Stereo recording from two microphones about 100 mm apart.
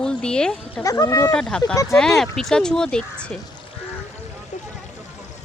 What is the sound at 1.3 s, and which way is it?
Speech, 10° left (ahead or behind).